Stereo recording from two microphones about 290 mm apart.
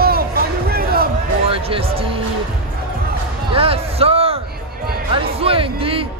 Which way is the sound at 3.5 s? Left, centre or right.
Centre.